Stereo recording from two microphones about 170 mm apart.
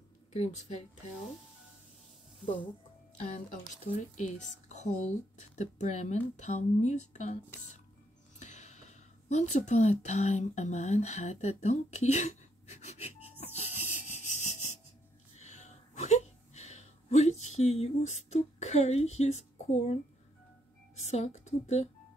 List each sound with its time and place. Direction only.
0.3 s speech: 40° left (ahead or behind)
3.2 s speech: 45° left (ahead or behind)
8.4 s speech: 45° left (ahead or behind)
13.4 s music: 40° left (ahead or behind)
15.3 s a sound: 45° left (ahead or behind)
21.0 s a woman's voice: 40° left (ahead or behind)